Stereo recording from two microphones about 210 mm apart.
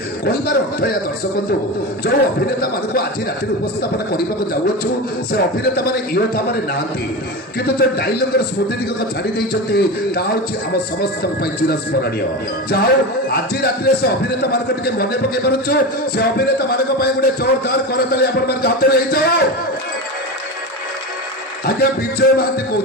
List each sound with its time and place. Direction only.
0.2 s a man's voice: 50° left (ahead or behind)
2.0 s a man's voice: 50° left (ahead or behind)
5.3 s a man's voice: 50° left (ahead or behind)
22.2 s a man's voice: 50° left (ahead or behind)